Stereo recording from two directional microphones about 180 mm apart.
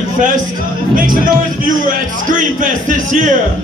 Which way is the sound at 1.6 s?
45° right (ahead or behind).